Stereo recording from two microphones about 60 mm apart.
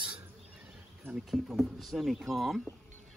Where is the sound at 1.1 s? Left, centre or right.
Centre.